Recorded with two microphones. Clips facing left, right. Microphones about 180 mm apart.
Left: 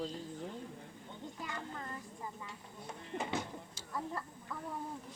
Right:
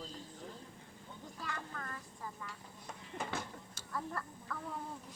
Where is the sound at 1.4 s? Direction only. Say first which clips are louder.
Even; 20° left (ahead or behind).